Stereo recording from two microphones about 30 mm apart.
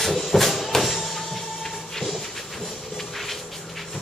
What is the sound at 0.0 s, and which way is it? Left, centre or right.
Music, centre.